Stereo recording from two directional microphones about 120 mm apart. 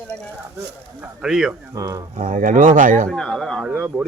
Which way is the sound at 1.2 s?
5° right (ahead or behind).